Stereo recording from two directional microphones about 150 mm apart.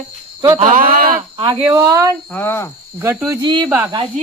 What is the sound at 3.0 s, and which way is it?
Speech, 15° right (ahead or behind).